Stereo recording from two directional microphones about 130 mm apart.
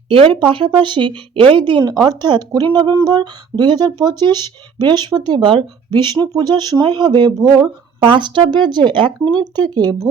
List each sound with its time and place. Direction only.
0.1 s speech: 45° right (ahead or behind)